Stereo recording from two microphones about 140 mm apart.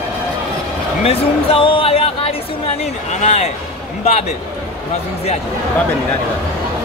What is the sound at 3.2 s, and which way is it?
Speech, 50° left (ahead or behind).